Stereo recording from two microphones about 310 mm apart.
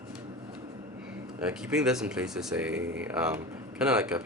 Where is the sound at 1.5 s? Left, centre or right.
Centre.